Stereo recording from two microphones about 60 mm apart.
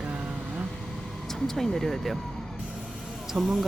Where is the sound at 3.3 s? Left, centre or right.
Centre.